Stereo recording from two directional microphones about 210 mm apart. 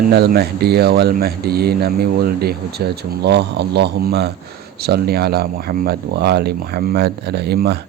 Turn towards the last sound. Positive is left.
turn(degrees=-50)  # may be behind; listen again after turning